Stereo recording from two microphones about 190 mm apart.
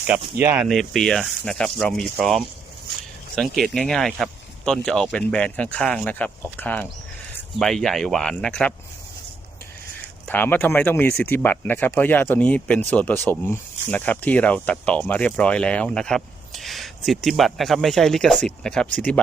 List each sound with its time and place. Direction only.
0.3 s speech: 10° right (ahead or behind)
10.2 s speech: 10° left (ahead or behind)